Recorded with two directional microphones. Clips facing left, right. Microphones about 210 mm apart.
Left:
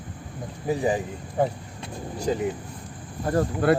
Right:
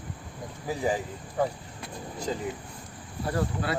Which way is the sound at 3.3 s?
50° left (ahead or behind).